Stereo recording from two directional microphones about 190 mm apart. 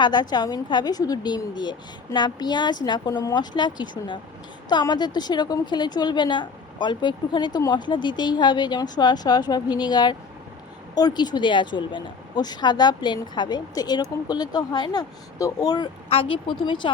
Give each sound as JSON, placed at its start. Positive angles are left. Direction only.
{"t": 0.0, "sound": "speech", "side_deg": 20}